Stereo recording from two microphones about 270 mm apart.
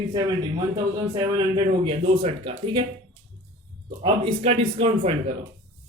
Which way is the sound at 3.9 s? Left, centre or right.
Centre.